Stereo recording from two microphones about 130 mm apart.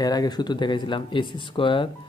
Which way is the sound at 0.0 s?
30° left (ahead or behind).